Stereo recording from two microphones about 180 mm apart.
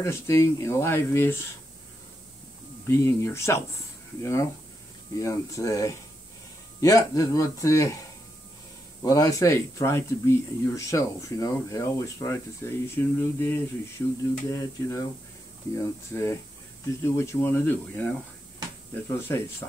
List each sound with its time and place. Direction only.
0.0 s speech: 15° left (ahead or behind)
2.9 s speech: 15° left (ahead or behind)
9.0 s speech: 20° left (ahead or behind)